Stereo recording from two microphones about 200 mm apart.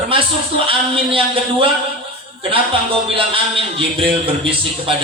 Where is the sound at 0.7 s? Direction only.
25° right (ahead or behind).